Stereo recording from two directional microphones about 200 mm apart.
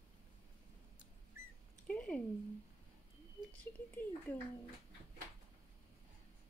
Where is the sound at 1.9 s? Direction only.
5° left (ahead or behind).